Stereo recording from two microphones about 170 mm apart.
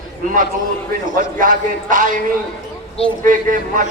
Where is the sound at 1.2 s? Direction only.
50° right (ahead or behind).